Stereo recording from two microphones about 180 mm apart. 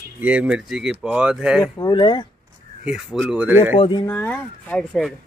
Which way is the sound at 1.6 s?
20° left (ahead or behind).